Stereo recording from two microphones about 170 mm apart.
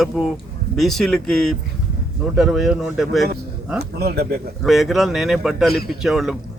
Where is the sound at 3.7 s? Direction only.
70° right (ahead or behind).